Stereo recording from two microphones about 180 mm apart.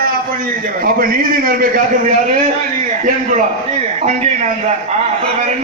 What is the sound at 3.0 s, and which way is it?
A man's voice, 45° right (ahead or behind).